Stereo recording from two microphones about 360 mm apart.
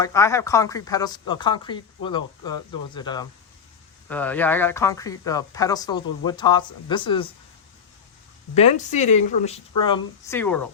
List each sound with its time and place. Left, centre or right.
0.0 s speech: centre
8.5 s speech: centre